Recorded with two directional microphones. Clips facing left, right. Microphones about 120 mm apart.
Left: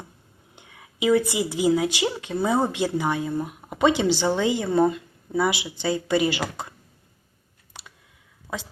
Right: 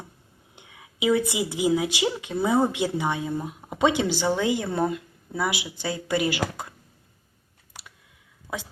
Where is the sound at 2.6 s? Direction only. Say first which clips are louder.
Left 1 dB; 15° right (ahead or behind).